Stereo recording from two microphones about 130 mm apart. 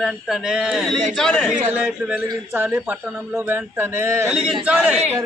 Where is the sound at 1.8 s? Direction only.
10° right (ahead or behind).